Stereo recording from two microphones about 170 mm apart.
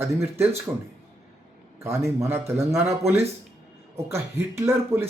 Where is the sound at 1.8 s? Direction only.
15° right (ahead or behind).